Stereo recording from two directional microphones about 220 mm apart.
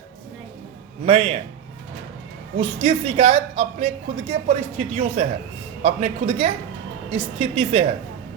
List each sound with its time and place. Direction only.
1.0 s a woman's voice: 25° right (ahead or behind)
2.6 s a woman's voice: 25° right (ahead or behind)